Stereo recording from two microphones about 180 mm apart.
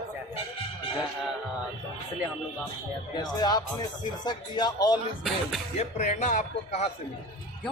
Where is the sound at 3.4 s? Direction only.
25° left (ahead or behind).